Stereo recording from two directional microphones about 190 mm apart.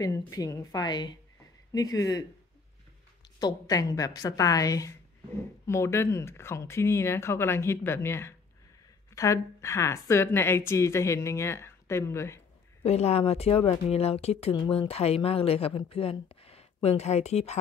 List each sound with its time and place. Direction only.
0.0 s a woman's voice: 20° left (ahead or behind)
3.3 s a woman's voice: 20° left (ahead or behind)
12.8 s speech: 35° left (ahead or behind)